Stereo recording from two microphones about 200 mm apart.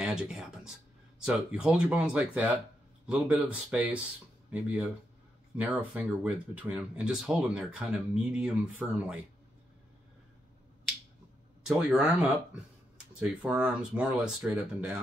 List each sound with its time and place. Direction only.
0.0 s speech: 5° right (ahead or behind)
11.6 s speech: 5° right (ahead or behind)